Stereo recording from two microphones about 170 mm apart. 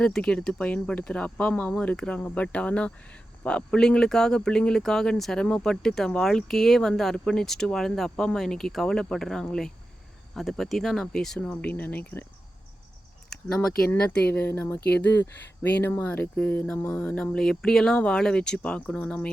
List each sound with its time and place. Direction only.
0.0 s speech: 5° left (ahead or behind)
13.3 s speech: 5° left (ahead or behind)